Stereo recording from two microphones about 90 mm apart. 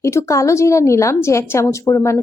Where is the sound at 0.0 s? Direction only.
30° left (ahead or behind).